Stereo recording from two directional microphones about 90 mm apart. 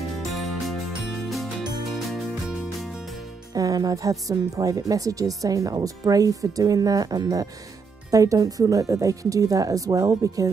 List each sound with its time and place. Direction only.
0.2 s music: centre (ahead or behind)
3.5 s speech: 45° right (ahead or behind)